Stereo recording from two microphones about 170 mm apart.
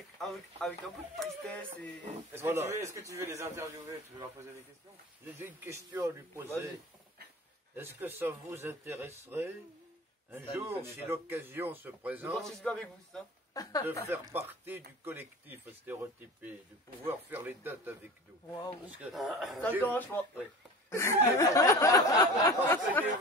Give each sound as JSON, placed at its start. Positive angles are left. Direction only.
{"t": 0.2, "sound": "speech", "side_deg": 0}
{"t": 2.3, "sound": "speech", "side_deg": -15}
{"t": 5.4, "sound": "speech", "side_deg": -15}
{"t": 7.7, "sound": "speech", "side_deg": -10}
{"t": 10.5, "sound": "speech", "side_deg": -15}
{"t": 12.4, "sound": "speech", "side_deg": 5}
{"t": 13.5, "sound": "speech", "side_deg": 20}
{"t": 14.1, "sound": "speech", "side_deg": -10}
{"t": 19.1, "sound": "speech", "side_deg": 0}
{"t": 19.8, "sound": "a sound", "side_deg": 10}